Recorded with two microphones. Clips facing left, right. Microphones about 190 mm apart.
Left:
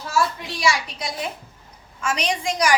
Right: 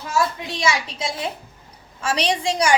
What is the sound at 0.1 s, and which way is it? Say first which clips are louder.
A woman's voice: right 1 dB; 20° right (ahead or behind).